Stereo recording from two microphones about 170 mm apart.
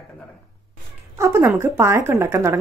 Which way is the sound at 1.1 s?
15° right (ahead or behind).